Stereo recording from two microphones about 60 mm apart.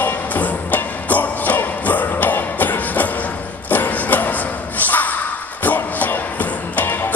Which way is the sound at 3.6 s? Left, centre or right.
Left.